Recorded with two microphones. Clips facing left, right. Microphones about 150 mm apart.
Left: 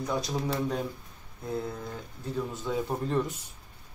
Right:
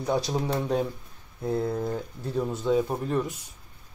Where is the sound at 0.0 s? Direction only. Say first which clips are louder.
Right 4 dB; 30° right (ahead or behind).